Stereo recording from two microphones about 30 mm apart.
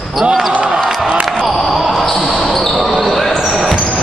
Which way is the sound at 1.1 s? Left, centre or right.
Right.